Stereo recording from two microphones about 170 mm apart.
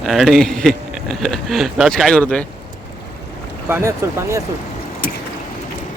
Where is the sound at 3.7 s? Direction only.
15° right (ahead or behind).